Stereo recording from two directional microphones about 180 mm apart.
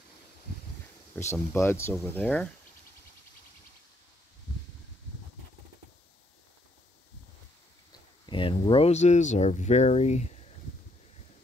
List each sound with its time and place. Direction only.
1.3 s speech: 15° left (ahead or behind)
8.3 s speech: 30° left (ahead or behind)